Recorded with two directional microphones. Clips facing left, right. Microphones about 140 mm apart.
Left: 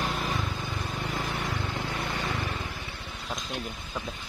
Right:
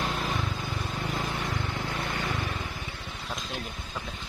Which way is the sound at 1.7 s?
15° left (ahead or behind).